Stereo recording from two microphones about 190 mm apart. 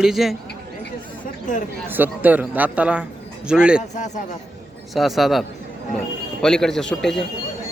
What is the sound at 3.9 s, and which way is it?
Speech, 40° left (ahead or behind).